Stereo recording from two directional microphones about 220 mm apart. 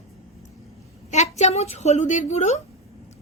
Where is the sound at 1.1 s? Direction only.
30° left (ahead or behind).